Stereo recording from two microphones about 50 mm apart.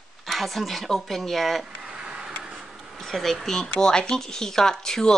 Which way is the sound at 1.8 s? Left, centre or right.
Centre.